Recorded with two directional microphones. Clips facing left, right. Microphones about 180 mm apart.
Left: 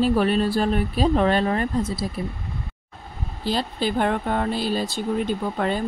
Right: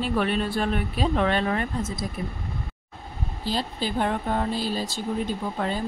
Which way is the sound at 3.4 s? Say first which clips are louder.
Left 4 dB; 65° left (ahead or behind).